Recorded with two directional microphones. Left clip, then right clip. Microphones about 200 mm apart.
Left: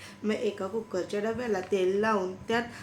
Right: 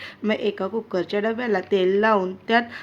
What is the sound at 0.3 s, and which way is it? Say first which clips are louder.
Speech: right 6 dB; 40° right (ahead or behind).